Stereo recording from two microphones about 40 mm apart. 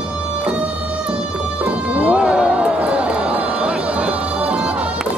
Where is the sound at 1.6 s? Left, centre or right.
Right.